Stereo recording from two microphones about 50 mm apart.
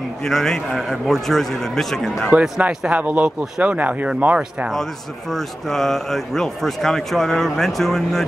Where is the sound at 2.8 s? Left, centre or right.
Right.